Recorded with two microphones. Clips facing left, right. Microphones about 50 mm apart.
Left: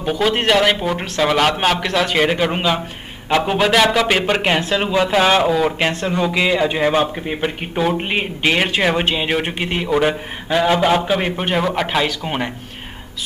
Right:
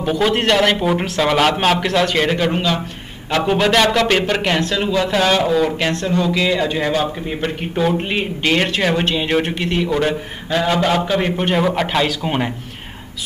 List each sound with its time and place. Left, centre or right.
0.0 s a man's voice: centre
5.8 s a man's voice: centre